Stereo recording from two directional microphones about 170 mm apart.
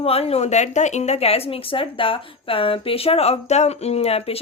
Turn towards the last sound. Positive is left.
turn(degrees=35)  # may be behind; listen again after turning